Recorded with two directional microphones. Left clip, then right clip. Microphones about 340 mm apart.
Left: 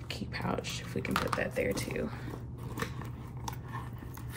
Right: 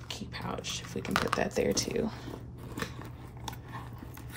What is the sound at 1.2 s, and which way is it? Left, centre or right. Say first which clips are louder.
Speech: right 3 dB; centre.